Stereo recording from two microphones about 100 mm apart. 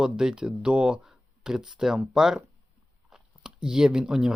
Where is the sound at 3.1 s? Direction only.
5° right (ahead or behind).